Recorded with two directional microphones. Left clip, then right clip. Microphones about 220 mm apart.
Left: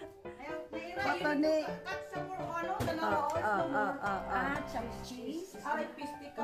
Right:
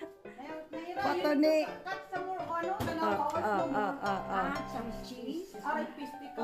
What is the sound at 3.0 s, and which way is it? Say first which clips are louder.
Speech: right 1 dB; 5° right (ahead or behind).